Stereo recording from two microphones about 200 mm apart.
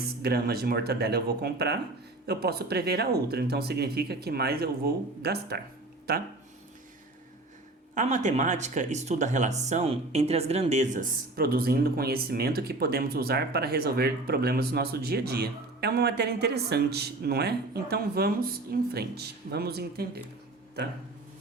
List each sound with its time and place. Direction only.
0.0 s speech: 50° right (ahead or behind)
7.9 s speech: 40° right (ahead or behind)